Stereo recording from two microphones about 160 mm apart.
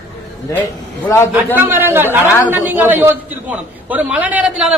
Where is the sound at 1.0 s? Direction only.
15° left (ahead or behind).